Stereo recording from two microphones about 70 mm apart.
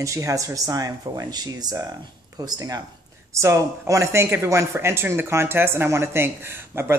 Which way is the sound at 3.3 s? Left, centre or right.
Right.